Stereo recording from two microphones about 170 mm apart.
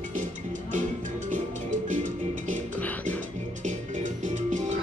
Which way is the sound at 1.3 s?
50° right (ahead or behind).